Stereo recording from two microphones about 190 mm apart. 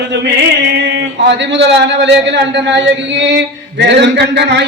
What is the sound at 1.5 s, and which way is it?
A man's voice, 65° right (ahead or behind).